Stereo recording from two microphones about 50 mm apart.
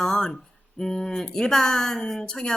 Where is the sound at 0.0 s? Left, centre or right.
Centre.